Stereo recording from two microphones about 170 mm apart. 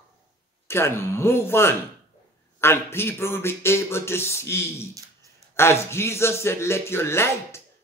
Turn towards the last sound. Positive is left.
turn(degrees=15)  # may be behind; listen again after turning